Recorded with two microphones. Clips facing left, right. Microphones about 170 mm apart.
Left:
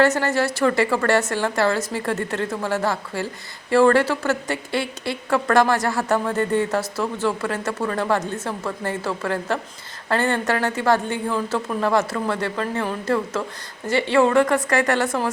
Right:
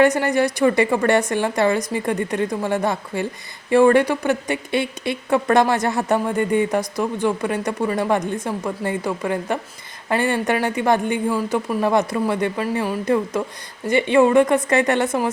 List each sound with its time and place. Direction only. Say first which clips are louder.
0.0 s a woman's voice: right 2 dB; 15° right (ahead or behind)